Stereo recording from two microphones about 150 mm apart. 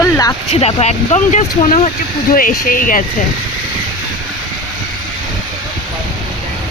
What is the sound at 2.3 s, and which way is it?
Speech, 70° left (ahead or behind).